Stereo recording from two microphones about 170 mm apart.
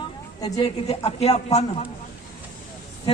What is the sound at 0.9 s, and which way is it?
Speech, 35° left (ahead or behind).